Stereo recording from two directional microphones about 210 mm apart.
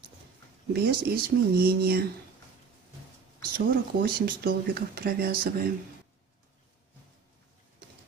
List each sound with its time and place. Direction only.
0.7 s speech: 45° right (ahead or behind)
3.5 s speech: 45° right (ahead or behind)